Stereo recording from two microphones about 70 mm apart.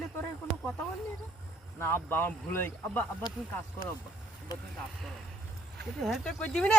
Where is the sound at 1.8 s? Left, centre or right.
Left.